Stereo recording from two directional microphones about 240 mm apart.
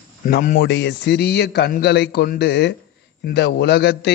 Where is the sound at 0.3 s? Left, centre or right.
Left.